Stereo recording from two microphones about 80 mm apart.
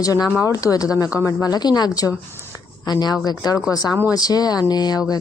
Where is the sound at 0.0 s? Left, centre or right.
Left.